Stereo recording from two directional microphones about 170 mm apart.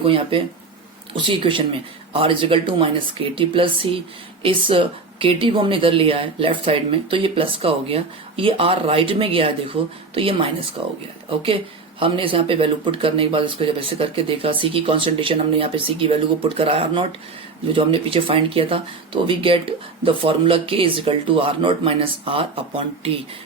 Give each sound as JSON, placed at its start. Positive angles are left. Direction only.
{"t": 0.0, "sound": "speech", "side_deg": -30}